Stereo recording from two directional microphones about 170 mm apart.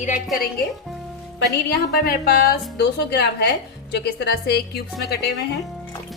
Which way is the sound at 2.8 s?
80° left.